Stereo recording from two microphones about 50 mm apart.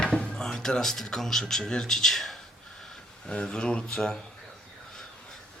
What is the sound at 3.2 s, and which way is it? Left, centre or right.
Speech, centre.